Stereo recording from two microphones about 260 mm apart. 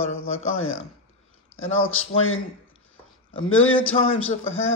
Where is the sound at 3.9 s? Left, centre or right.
Left.